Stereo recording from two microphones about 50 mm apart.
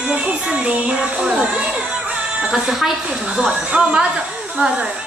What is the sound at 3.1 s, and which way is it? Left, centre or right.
Speech, centre.